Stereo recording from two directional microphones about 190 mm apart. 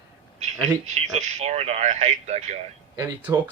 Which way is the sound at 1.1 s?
35° right (ahead or behind).